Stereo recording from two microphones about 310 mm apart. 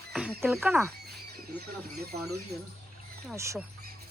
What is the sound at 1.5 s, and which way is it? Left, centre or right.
Speech, right.